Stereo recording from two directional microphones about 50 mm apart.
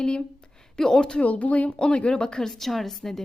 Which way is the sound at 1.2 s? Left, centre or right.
Left.